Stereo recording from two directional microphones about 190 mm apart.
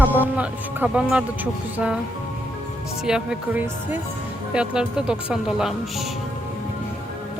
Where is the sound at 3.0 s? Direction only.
5° right (ahead or behind).